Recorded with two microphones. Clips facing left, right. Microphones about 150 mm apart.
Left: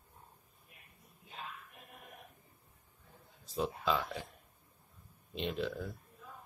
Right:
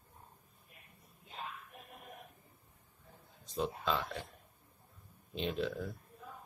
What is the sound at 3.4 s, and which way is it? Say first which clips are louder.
Speech: left 1 dB; 5° left (ahead or behind).